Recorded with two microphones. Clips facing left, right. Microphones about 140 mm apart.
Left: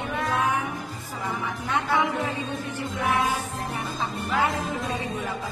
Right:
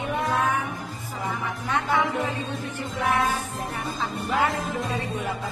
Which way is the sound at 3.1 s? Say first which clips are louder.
Right 1 dB; 15° left (ahead or behind).